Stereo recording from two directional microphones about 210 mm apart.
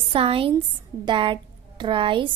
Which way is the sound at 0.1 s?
25° right (ahead or behind).